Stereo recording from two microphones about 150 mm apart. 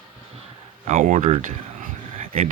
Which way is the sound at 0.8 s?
50° right (ahead or behind).